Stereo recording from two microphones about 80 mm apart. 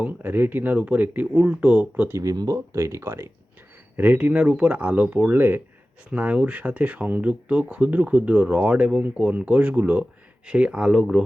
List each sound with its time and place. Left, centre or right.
0.0 s speech: right
2.1 s speech: right
2.7 s speech: right
3.9 s speech: right